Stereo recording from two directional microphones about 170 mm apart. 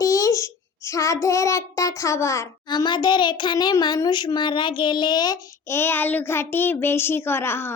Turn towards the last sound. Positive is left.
turn(degrees=15)  # may be behind; listen again after turning